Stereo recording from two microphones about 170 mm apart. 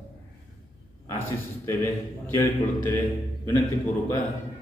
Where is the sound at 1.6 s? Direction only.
15° left (ahead or behind).